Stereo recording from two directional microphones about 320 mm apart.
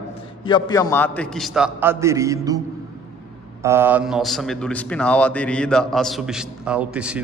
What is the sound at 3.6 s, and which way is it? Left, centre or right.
A man's voice, centre.